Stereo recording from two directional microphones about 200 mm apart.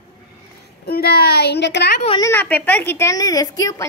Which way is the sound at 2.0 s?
25° left (ahead or behind).